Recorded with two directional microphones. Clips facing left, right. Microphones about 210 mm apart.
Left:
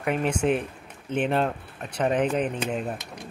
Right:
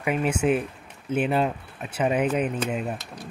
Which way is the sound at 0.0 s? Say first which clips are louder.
Right 1 dB; 5° right (ahead or behind).